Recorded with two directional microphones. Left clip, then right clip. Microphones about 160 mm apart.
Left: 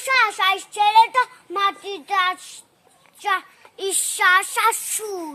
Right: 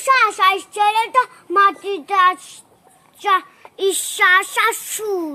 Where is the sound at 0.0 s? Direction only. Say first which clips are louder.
Right 4 dB; 20° left (ahead or behind).